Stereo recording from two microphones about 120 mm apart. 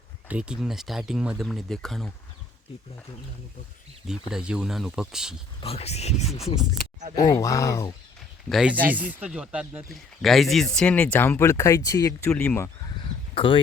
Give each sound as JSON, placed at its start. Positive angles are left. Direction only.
{"t": 0.3, "sound": "speech", "side_deg": -10}
{"t": 4.0, "sound": "speech", "side_deg": -5}
{"t": 5.5, "sound": "speech", "side_deg": 55}
{"t": 7.2, "sound": "speech", "side_deg": 30}
{"t": 8.4, "sound": "speech", "side_deg": 0}
{"t": 8.7, "sound": "speech", "side_deg": -15}
{"t": 9.9, "sound": "speech", "side_deg": 0}
{"t": 12.3, "sound": "speech", "side_deg": 5}
{"t": 13.0, "sound": "a sound", "side_deg": 45}